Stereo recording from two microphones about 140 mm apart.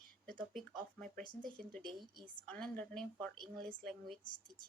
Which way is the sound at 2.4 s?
10° left (ahead or behind).